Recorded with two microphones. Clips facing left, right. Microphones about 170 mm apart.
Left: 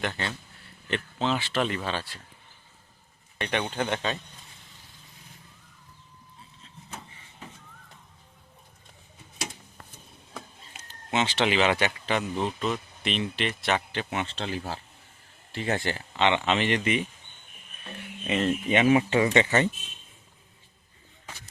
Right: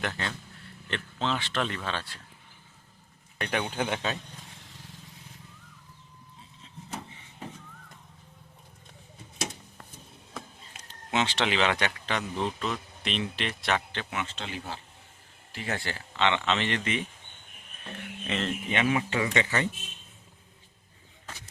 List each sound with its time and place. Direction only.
0.0 s speech: centre (ahead or behind)
3.3 s speech: centre (ahead or behind)
10.3 s speech: 5° left (ahead or behind)
14.1 s speech: 30° left (ahead or behind)
15.5 s speech: 25° left (ahead or behind)
18.3 s speech: 10° left (ahead or behind)